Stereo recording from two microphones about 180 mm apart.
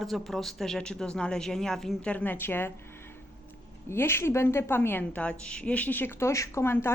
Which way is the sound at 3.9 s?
15° left (ahead or behind).